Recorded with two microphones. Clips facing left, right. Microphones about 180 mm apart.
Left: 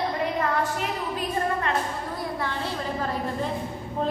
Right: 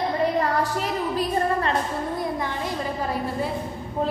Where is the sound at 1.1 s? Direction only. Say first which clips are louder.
Right 4 dB; 35° right (ahead or behind).